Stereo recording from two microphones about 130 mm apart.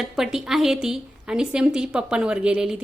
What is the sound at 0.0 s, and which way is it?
A woman's voice, 5° right (ahead or behind).